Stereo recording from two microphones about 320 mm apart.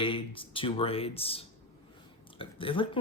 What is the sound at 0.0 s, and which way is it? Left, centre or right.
Speech, centre.